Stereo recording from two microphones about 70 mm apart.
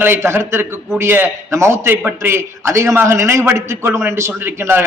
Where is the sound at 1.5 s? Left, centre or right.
Right.